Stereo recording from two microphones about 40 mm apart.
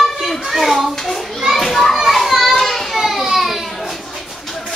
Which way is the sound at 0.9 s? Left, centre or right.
Centre.